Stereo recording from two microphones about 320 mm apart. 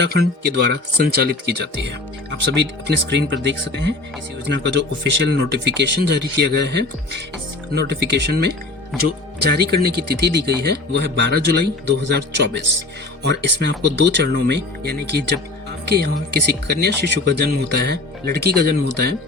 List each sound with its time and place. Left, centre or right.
0.0 s speech: right